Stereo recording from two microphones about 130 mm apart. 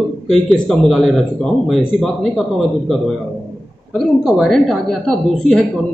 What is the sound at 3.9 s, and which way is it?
A man's voice, centre (ahead or behind).